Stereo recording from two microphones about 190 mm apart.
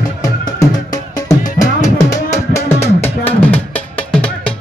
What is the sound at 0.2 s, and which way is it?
Music, 20° left (ahead or behind).